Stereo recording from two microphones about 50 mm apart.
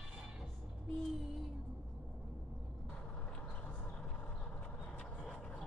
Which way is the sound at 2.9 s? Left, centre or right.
Left.